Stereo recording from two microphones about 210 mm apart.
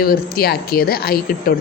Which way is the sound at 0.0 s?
45° left (ahead or behind).